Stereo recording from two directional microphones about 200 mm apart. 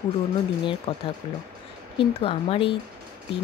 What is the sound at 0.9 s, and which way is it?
Speech, 30° left (ahead or behind).